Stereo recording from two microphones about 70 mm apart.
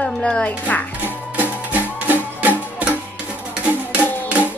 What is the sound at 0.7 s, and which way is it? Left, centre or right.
Speech, left.